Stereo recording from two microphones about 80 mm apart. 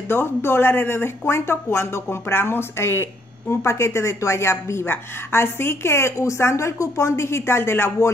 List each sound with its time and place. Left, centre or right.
0.1 s speech: left